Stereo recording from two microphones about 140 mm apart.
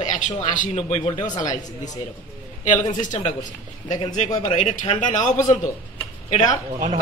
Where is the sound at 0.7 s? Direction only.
40° left (ahead or behind).